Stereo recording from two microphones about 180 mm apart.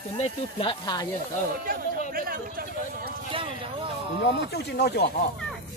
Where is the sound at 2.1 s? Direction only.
55° right (ahead or behind).